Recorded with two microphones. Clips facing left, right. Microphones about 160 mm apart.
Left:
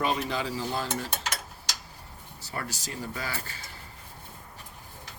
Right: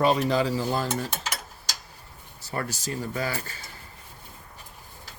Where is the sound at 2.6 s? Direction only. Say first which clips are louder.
Right 5 dB; 45° right (ahead or behind).